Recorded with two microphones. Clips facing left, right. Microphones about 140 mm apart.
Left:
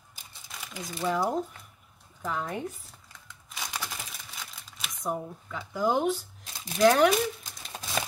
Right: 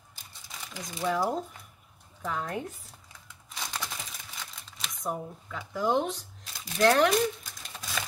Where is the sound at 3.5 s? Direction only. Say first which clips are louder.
Even; 10° left (ahead or behind).